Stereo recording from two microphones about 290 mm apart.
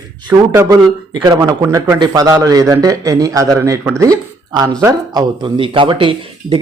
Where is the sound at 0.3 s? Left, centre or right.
Centre.